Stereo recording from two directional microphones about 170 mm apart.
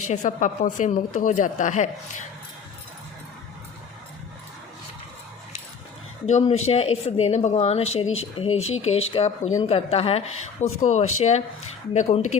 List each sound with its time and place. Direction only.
0.1 s a woman's voice: 45° left (ahead or behind)
6.2 s a woman's voice: 40° left (ahead or behind)